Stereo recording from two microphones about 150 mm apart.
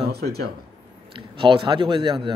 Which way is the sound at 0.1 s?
90° right.